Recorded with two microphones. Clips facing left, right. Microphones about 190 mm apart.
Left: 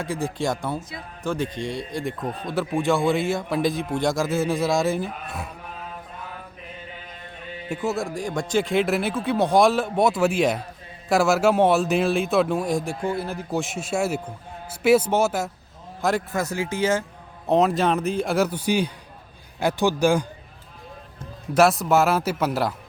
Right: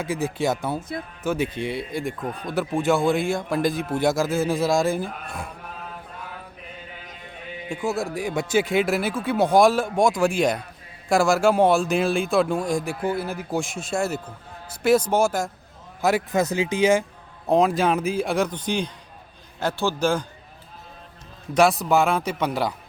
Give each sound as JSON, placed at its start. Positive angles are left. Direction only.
{"t": 0.0, "sound": "a man's voice", "side_deg": -5}
{"t": 0.8, "sound": "speech", "side_deg": -55}
{"t": 1.2, "sound": "a man's voice", "side_deg": -5}
{"t": 7.9, "sound": "a man's voice", "side_deg": -5}
{"t": 16.3, "sound": "speech", "side_deg": -20}
{"t": 17.4, "sound": "a man's voice", "side_deg": 0}
{"t": 21.5, "sound": "a man's voice", "side_deg": 0}